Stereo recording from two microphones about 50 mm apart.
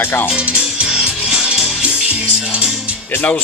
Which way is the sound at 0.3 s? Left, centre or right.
Right.